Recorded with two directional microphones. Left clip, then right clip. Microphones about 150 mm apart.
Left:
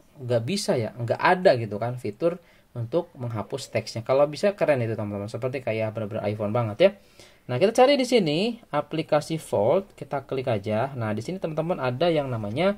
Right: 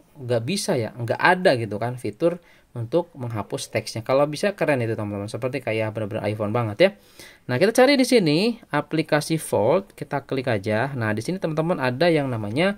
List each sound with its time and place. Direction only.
0.3 s speech: 25° right (ahead or behind); by 12.7 s 40° right (ahead or behind)